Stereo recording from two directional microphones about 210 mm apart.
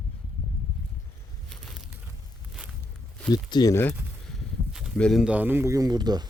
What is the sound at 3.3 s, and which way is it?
Speech, 20° left (ahead or behind).